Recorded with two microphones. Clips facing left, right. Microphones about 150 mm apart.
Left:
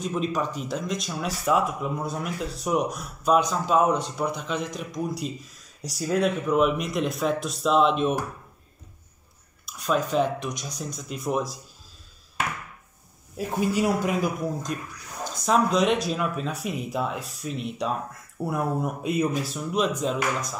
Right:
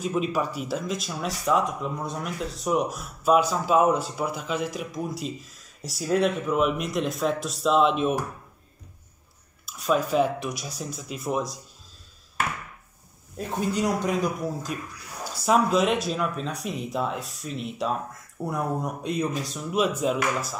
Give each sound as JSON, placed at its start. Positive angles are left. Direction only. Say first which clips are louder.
{"t": 0.0, "sound": "speech", "louder": "right 1 dB", "side_deg": -5}
{"t": 9.7, "sound": "speech", "louder": "right 1 dB", "side_deg": 0}
{"t": 13.4, "sound": "speech", "louder": "left 2 dB", "side_deg": 5}